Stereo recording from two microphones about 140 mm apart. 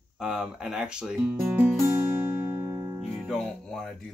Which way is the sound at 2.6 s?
20° right (ahead or behind).